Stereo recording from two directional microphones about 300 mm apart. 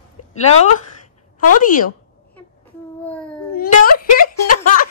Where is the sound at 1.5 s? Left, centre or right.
Left.